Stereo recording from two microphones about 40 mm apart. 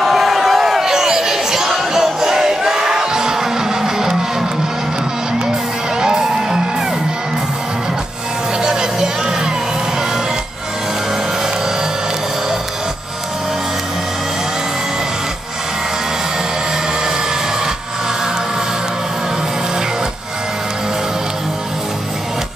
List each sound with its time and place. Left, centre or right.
0.0 s a sound: centre
5.9 s music: centre
8.6 s music: centre